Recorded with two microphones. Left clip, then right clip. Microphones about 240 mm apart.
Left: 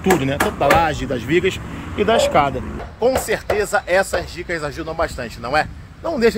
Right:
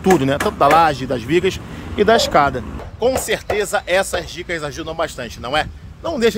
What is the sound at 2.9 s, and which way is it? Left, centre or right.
Speech, centre.